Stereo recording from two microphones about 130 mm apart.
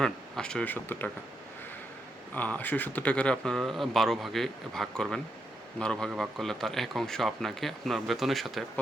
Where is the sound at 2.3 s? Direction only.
10° left (ahead or behind).